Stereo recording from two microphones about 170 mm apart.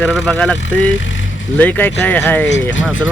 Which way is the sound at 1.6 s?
10° left (ahead or behind).